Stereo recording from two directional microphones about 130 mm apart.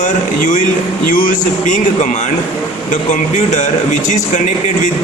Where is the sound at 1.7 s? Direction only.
65° left (ahead or behind).